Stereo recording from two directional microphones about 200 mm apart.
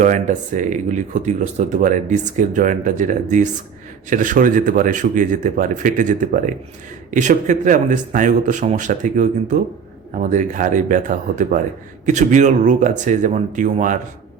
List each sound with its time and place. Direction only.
0.0 s speech: 40° right (ahead or behind)